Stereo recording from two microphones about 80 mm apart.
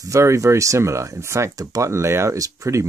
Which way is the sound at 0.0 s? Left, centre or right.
Right.